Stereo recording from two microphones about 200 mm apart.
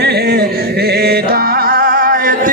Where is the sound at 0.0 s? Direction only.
55° right (ahead or behind).